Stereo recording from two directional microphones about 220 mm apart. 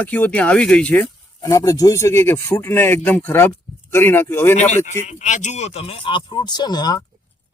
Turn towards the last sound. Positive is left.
turn(degrees=20)  # may be behind; listen again after turning